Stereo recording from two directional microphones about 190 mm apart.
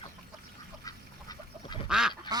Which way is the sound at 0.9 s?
20° left (ahead or behind).